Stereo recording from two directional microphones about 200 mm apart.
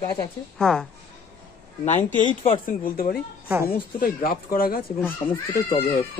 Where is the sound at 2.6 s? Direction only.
45° left (ahead or behind).